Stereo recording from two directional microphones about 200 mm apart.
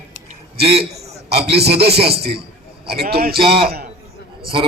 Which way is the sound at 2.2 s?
50° right (ahead or behind).